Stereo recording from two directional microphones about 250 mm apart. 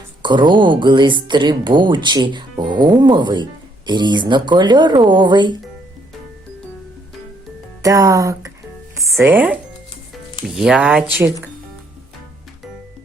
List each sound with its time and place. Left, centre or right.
0.2 s speech: centre
7.8 s speech: centre